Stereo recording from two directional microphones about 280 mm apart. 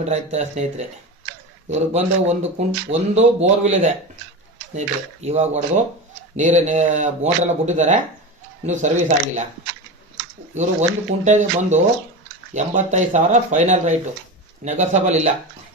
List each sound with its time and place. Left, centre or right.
0.0 s speech: right
10.5 s speech: right